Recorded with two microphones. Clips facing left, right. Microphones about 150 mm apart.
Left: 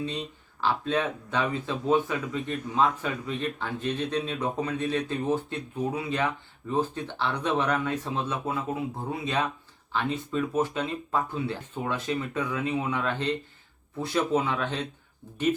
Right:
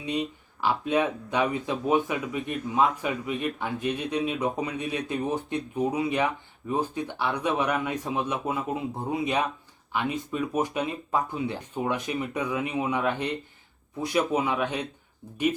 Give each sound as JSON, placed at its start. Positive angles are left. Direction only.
{"t": 0.0, "sound": "speech", "side_deg": -15}